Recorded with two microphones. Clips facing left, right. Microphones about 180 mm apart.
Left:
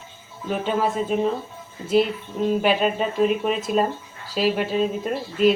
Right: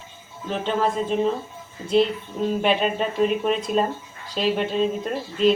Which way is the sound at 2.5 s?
Centre (ahead or behind).